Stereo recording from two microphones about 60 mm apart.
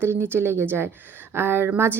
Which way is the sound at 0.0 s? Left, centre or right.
Right.